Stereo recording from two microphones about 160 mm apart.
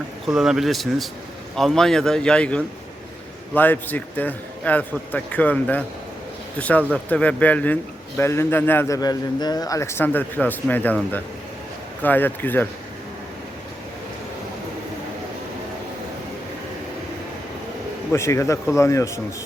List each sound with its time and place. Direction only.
0.3 s a man's voice: 5° right (ahead or behind)
12.0 s a man's voice: 10° left (ahead or behind)
18.1 s a man's voice: 15° left (ahead or behind)